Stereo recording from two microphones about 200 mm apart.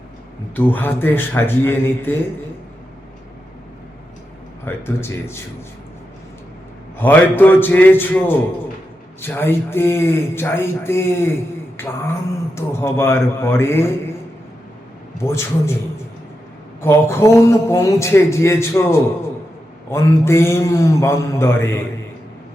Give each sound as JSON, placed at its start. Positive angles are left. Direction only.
{"t": 0.5, "sound": "a man's voice", "side_deg": 10}
{"t": 4.6, "sound": "a man's voice", "side_deg": 10}
{"t": 7.0, "sound": "a man's voice", "side_deg": 10}
{"t": 15.2, "sound": "a man's voice", "side_deg": 15}
{"t": 16.8, "sound": "a man's voice", "side_deg": 10}